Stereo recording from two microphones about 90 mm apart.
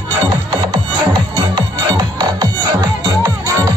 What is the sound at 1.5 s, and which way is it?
Music, 55° right (ahead or behind).